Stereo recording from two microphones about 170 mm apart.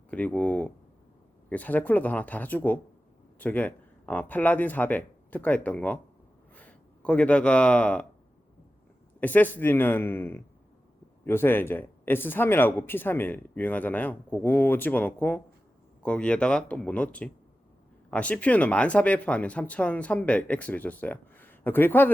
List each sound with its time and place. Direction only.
0.1 s speech: 10° left (ahead or behind)
9.2 s speech: 10° left (ahead or behind)